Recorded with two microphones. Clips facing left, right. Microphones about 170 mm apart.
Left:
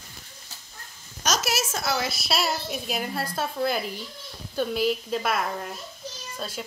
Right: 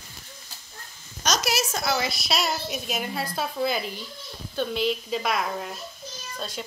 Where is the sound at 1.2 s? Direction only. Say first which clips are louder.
Right 1 dB; 5° left (ahead or behind).